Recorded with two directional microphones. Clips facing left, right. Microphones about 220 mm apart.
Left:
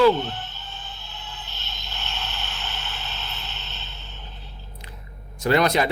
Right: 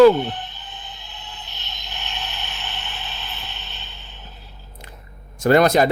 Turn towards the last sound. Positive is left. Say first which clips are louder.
# right 5 dB
turn(degrees=-45)  # may be behind; listen again after turning